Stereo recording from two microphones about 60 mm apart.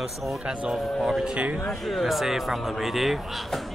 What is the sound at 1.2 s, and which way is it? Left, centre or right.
Speech, right.